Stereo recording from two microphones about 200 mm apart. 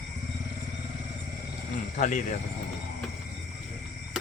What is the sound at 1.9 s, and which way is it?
Speech, 40° left (ahead or behind).